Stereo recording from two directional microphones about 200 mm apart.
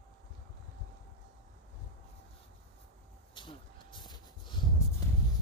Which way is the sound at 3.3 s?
25° left (ahead or behind).